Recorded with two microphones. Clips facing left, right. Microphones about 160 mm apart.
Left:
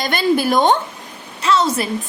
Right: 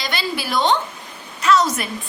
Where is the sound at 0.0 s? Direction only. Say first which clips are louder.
Left 9 dB; 50° left (ahead or behind).